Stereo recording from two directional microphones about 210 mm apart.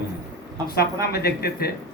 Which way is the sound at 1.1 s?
50° left (ahead or behind).